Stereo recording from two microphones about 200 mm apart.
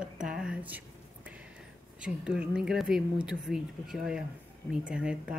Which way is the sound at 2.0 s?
5° right (ahead or behind).